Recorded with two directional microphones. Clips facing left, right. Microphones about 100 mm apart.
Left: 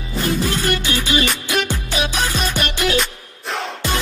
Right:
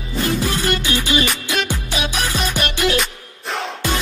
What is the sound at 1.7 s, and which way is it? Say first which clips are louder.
Music: left 1 dB; 15° right (ahead or behind).